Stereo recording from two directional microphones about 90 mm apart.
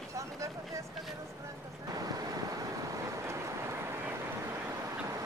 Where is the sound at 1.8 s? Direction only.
45° right (ahead or behind).